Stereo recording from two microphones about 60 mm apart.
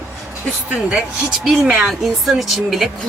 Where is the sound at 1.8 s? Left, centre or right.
Centre.